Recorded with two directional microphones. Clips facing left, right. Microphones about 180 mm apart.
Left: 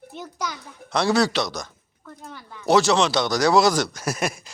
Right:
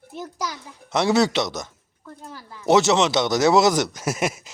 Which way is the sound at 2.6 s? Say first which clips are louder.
Right 1 dB; 20° right (ahead or behind).